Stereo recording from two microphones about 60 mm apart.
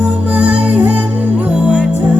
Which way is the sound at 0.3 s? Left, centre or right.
Centre.